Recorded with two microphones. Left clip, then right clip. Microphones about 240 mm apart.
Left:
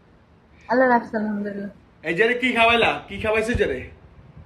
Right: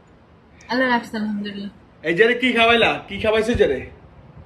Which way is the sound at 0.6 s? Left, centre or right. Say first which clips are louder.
Left 2 dB; right.